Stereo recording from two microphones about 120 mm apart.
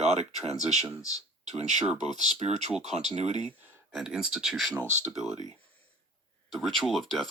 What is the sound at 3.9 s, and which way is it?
Speech, centre (ahead or behind).